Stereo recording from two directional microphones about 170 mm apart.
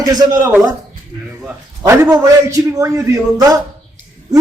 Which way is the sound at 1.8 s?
15° right (ahead or behind).